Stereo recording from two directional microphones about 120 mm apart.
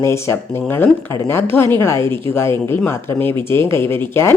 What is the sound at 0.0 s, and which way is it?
A woman's voice, 20° left (ahead or behind).